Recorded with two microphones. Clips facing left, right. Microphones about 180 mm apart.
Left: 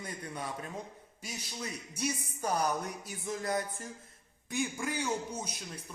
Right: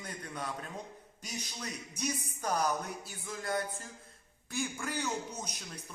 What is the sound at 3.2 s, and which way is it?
Music, 20° left (ahead or behind).